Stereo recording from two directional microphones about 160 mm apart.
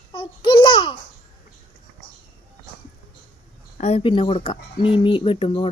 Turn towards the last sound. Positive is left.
turn(degrees=35)  # may be behind; listen again after turning